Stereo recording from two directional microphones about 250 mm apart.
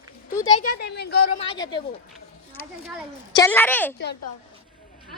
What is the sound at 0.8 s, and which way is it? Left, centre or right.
Speech, left.